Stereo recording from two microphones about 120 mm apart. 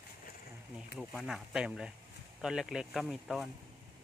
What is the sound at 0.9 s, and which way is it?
Speech, centre (ahead or behind).